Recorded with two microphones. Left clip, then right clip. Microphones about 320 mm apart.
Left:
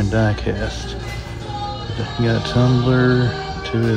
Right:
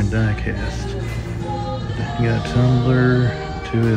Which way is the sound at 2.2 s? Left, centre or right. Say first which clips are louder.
Left 3 dB; centre.